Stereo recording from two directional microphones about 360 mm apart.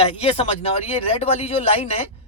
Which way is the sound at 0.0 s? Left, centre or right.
Centre.